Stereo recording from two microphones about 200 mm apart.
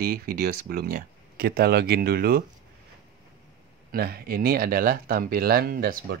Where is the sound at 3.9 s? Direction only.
50° right (ahead or behind).